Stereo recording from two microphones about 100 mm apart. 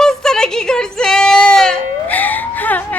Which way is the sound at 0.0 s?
5° left (ahead or behind).